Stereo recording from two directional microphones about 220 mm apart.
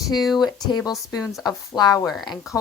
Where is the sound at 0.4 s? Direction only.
15° left (ahead or behind).